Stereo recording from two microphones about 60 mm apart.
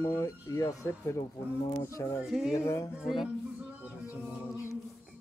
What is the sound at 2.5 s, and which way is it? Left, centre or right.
Speech, left.